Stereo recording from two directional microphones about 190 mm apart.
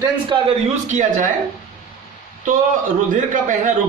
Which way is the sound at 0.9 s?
40° right (ahead or behind).